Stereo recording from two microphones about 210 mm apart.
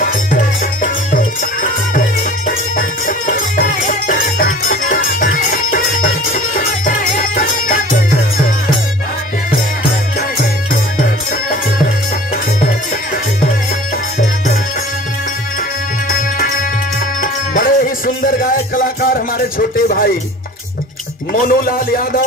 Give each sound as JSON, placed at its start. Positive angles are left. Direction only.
{"t": 0.8, "sound": "music", "side_deg": 40}
{"t": 10.4, "sound": "music", "side_deg": 40}
{"t": 16.1, "sound": "music", "side_deg": 40}
{"t": 21.3, "sound": "a man's voice", "side_deg": 45}